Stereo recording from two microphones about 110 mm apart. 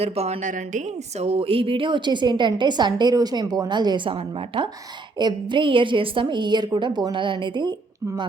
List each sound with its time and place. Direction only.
0.0 s a woman's voice: 70° right (ahead or behind); by 8.3 s 40° right (ahead or behind)